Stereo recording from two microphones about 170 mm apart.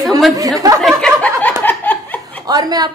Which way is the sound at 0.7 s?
5° left (ahead or behind).